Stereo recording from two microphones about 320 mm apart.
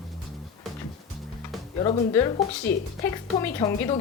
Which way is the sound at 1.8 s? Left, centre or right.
Centre.